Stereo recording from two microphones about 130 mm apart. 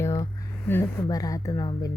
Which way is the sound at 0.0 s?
25° left (ahead or behind).